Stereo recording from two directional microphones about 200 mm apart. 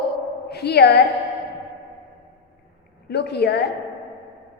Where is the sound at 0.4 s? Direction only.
55° left (ahead or behind).